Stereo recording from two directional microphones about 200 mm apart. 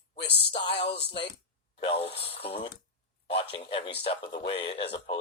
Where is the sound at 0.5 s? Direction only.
30° left (ahead or behind).